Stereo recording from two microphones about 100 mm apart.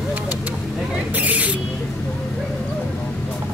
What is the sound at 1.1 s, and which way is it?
Owl, 15° right (ahead or behind).